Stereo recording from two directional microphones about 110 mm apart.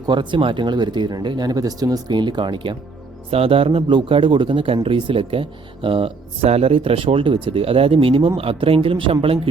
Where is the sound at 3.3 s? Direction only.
60° right (ahead or behind).